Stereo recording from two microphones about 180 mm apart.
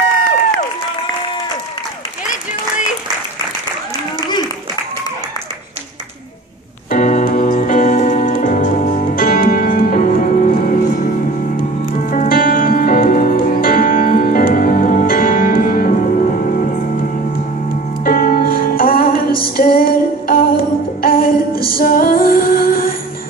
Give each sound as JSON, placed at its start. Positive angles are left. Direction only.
{"t": 6.9, "sound": "music", "side_deg": 45}
{"t": 18.0, "sound": "music", "side_deg": 55}